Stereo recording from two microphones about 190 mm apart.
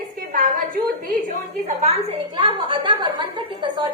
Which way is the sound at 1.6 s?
35° right (ahead or behind).